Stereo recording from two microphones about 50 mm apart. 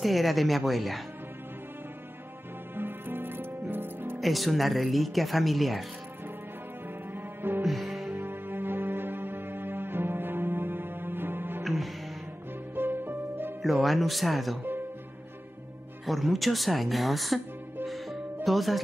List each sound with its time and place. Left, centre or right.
0.0 s speech: centre
2.7 s music: right
4.2 s speech: centre
7.6 s music: centre
8.1 s music: right
11.6 s music: centre
12.7 s music: right
13.6 s speech: centre
16.1 s speech: centre
17.8 s music: centre